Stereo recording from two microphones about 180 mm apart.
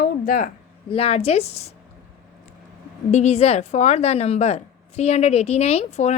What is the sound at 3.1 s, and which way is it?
A woman's voice, 35° left (ahead or behind).